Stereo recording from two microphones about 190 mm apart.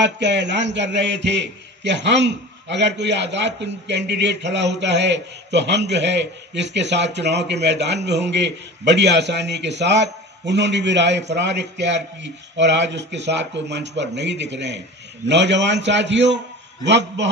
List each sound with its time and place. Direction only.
0.0 s a man's voice: 70° right (ahead or behind)